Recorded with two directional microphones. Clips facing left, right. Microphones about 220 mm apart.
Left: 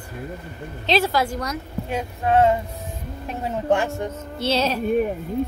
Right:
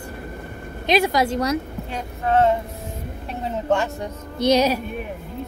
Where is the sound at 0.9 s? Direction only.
15° right (ahead or behind).